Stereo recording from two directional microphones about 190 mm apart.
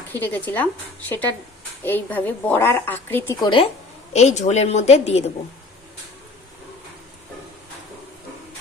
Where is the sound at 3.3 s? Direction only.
25° left (ahead or behind).